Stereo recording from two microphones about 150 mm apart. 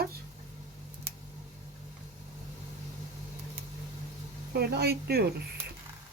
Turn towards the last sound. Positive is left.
turn(degrees=-90)